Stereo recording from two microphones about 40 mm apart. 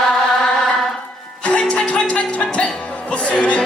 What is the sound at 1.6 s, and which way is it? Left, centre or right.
Music, left.